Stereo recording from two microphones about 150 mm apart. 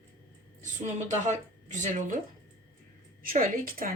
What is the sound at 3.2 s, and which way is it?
Speech, 70° right (ahead or behind).